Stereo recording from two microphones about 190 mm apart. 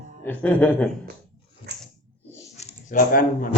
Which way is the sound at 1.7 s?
60° right (ahead or behind).